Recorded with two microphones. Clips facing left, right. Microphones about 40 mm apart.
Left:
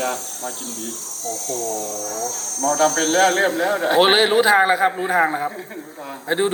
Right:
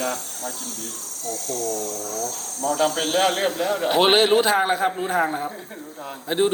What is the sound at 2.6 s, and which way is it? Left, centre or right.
A man's voice, left.